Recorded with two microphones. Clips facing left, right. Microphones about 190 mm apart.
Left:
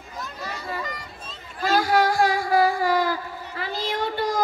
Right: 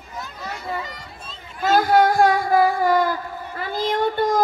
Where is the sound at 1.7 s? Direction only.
55° right (ahead or behind).